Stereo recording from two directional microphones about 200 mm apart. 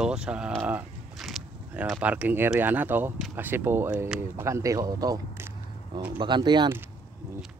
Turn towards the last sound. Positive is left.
turn(degrees=-20)  # may be behind; listen again after turning